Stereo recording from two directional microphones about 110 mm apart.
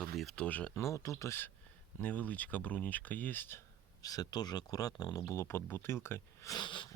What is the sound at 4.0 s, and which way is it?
Speech, 35° left (ahead or behind).